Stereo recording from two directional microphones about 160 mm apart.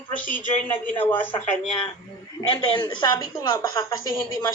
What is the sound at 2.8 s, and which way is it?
A woman's voice, 25° left (ahead or behind).